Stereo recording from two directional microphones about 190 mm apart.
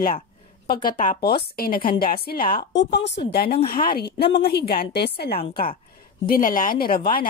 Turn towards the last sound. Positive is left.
turn(degrees=50)  # may be behind; listen again after turning